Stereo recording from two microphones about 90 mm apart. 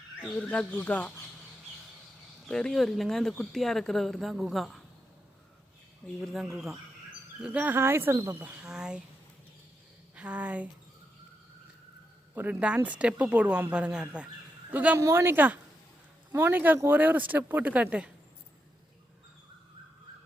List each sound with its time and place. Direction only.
0.2 s speech: 10° left (ahead or behind)
2.5 s a woman's voice: 5° left (ahead or behind)
6.2 s a woman's voice: centre (ahead or behind)
7.4 s speech: 15° right (ahead or behind)
8.6 s speech: 10° right (ahead or behind)
10.2 s speech: 15° right (ahead or behind)
12.3 s speech: 20° right (ahead or behind)
14.9 s speech: 30° right (ahead or behind); by 18.1 s 15° right (ahead or behind)